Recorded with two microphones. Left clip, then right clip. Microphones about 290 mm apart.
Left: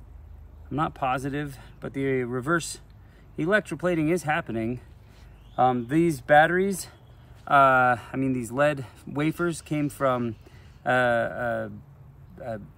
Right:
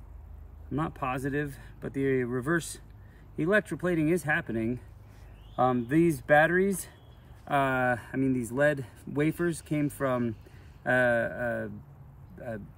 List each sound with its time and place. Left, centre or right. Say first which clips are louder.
0.7 s speech: left 6 dB; centre